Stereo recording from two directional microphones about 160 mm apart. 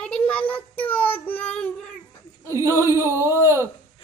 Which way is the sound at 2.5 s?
20° right (ahead or behind).